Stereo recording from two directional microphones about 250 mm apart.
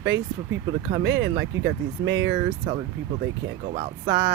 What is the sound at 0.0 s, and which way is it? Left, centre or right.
Speech, right.